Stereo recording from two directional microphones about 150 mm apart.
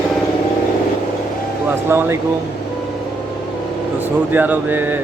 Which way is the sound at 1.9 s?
15° right (ahead or behind).